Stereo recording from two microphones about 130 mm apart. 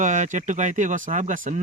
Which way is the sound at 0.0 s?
75° right (ahead or behind).